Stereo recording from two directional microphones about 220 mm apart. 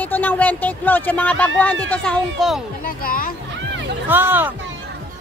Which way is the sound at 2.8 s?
40° left (ahead or behind).